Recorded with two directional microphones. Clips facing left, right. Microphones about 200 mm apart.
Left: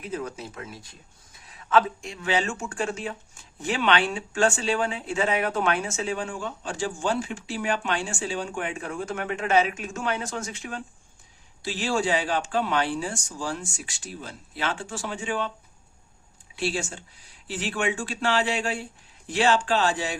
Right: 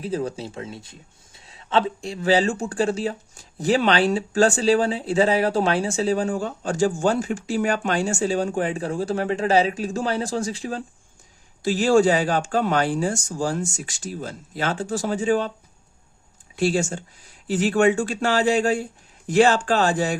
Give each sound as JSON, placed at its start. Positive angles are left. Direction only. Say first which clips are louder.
{"t": 0.0, "sound": "speech", "louder": "right 6 dB", "side_deg": -30}
{"t": 11.6, "sound": "speech", "louder": "right 9 dB", "side_deg": -45}
{"t": 16.6, "sound": "speech", "louder": "right 7 dB", "side_deg": -45}